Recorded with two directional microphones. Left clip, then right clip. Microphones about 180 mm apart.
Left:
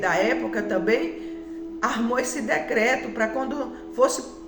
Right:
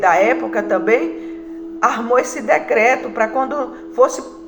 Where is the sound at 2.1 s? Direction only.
35° left (ahead or behind).